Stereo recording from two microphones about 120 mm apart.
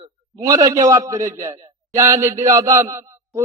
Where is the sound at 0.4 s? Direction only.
30° right (ahead or behind).